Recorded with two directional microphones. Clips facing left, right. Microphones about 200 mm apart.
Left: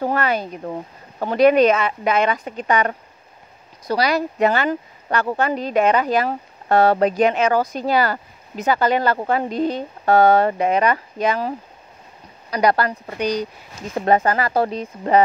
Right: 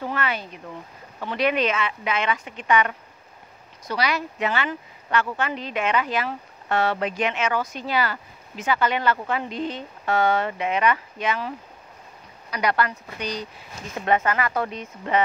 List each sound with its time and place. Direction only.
0.0 s speech: 40° left (ahead or behind)